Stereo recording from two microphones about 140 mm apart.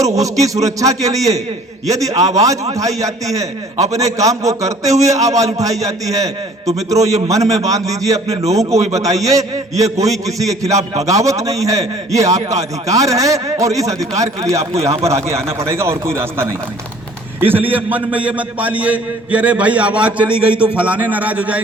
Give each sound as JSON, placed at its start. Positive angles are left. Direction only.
{"t": 0.0, "sound": "a man's voice", "side_deg": -25}
{"t": 14.6, "sound": "speech", "side_deg": -50}
{"t": 14.8, "sound": "a man's voice", "side_deg": -20}